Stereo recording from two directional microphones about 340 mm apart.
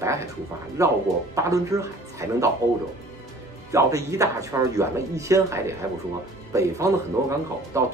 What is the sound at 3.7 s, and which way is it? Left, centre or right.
Speech, centre.